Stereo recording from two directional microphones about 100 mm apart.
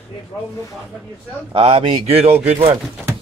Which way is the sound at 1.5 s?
70° right (ahead or behind).